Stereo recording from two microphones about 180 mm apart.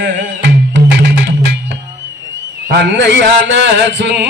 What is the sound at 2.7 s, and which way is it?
Mantra, 75° right (ahead or behind).